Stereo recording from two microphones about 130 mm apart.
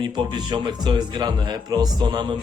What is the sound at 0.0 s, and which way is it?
Speech, 35° right (ahead or behind).